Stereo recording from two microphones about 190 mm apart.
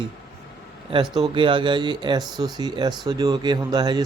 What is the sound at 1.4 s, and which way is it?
A man's voice, 25° right (ahead or behind).